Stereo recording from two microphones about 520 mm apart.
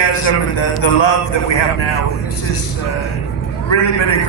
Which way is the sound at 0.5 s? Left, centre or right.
Left.